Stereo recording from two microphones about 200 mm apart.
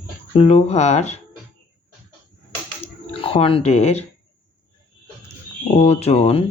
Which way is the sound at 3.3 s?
25° left (ahead or behind).